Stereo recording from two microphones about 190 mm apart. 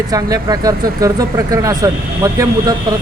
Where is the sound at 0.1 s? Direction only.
20° right (ahead or behind).